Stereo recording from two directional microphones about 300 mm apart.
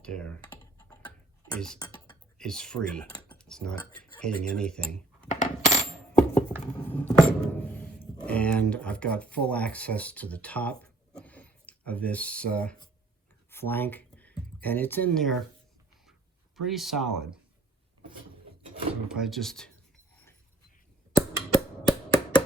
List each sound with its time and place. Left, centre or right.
0.0 s speech: centre
0.4 s computer keyboard: centre
1.5 s speech: centre
3.1 s computer keyboard: centre
3.3 s cutlery: centre
4.2 s speech: centre
5.3 s coin: left
6.7 s a sound: centre
8.2 s speech: centre
16.6 s speech: centre
19.0 s speech: centre
21.5 s chop: centre